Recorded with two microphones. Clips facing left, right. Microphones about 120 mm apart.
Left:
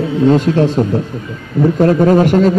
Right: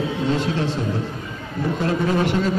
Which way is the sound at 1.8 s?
45° left (ahead or behind).